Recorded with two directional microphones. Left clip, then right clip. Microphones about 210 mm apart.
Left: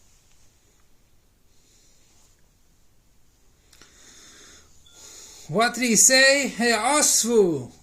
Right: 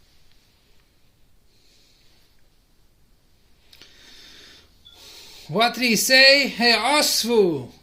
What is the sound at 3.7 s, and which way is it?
Speech, 15° left (ahead or behind).